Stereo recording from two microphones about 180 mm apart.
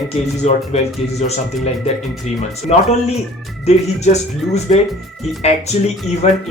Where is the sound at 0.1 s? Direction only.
35° left (ahead or behind).